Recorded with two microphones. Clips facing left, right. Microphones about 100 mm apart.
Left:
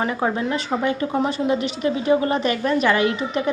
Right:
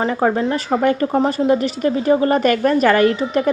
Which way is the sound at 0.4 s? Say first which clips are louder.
Right 5 dB; 30° right (ahead or behind).